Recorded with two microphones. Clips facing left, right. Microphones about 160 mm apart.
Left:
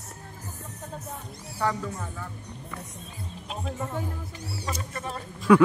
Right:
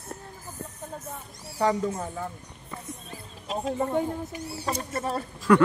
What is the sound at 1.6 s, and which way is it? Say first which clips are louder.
Speech: right 4 dB; 25° right (ahead or behind).